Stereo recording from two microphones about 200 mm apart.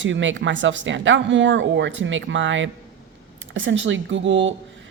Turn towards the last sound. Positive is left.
turn(degrees=-70)  # may be behind; listen again after turning